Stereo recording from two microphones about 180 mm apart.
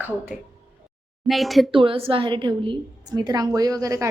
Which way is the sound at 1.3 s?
Centre (ahead or behind).